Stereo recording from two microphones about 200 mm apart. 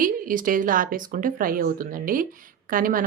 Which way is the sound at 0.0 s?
45° right (ahead or behind).